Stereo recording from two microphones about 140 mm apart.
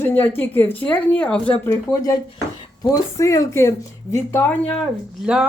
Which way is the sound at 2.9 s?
20° left (ahead or behind).